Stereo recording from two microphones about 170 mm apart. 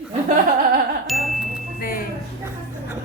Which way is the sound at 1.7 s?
60° left (ahead or behind).